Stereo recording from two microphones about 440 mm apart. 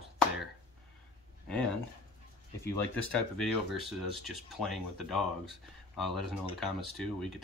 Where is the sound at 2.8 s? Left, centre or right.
Centre.